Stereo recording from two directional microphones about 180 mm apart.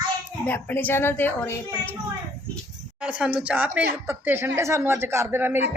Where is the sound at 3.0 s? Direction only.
5° right (ahead or behind).